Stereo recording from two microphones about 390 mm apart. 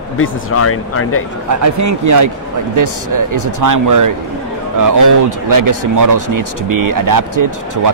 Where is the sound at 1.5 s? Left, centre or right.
Right.